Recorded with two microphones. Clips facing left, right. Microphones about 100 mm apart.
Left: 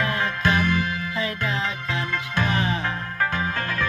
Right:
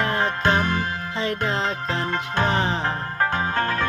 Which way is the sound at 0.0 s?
35° right (ahead or behind).